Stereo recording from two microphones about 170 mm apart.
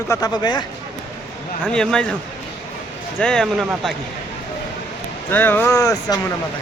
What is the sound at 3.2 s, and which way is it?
Speech, 5° left (ahead or behind).